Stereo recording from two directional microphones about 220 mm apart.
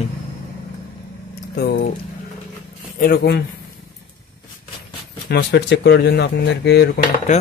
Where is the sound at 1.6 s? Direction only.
45° left (ahead or behind).